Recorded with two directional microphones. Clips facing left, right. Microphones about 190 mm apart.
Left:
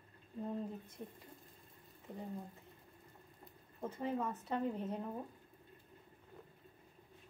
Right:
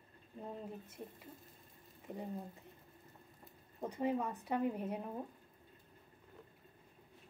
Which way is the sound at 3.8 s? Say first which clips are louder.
Right 2 dB; 15° right (ahead or behind).